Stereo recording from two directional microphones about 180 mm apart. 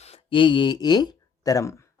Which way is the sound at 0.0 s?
30° left (ahead or behind).